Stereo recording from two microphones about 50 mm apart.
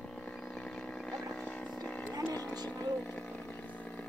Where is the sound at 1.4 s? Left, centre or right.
Left.